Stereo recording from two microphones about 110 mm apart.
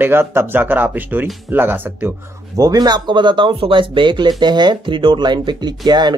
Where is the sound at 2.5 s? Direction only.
35° right (ahead or behind).